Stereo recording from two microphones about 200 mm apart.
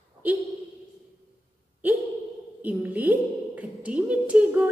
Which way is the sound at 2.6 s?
10° right (ahead or behind).